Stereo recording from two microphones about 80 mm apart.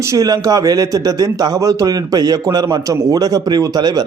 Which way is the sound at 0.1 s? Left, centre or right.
Right.